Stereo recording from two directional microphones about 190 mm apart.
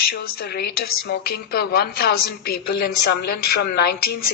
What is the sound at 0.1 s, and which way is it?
A woman's voice, 60° left (ahead or behind).